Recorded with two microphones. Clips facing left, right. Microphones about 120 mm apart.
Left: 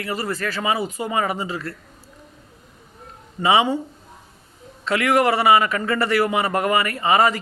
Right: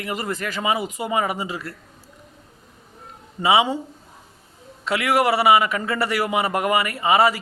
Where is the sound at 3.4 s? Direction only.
10° right (ahead or behind).